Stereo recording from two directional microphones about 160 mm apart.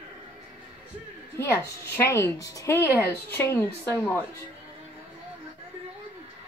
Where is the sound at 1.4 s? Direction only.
15° left (ahead or behind).